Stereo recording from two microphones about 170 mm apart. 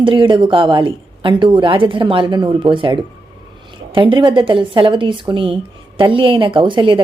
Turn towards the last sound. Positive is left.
turn(degrees=-30)  # may be behind; listen again after turning